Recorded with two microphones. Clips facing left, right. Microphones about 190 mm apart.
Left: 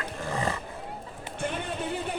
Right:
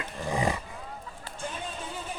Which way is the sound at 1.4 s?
65° left (ahead or behind).